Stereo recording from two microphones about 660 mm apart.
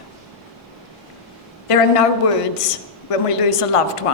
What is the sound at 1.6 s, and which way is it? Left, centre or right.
Speech, left.